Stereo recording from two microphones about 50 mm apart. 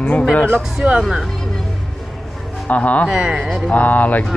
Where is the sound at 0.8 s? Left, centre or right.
Right.